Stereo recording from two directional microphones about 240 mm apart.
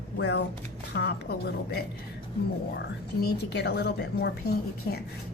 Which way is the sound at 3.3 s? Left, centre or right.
Left.